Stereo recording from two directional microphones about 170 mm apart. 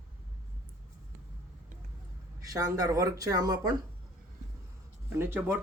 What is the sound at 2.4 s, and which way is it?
Speech, 20° right (ahead or behind).